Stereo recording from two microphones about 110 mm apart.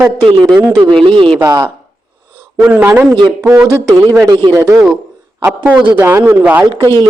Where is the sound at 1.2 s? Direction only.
50° right (ahead or behind).